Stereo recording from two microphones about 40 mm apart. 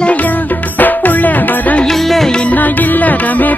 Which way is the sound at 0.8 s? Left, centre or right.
Left.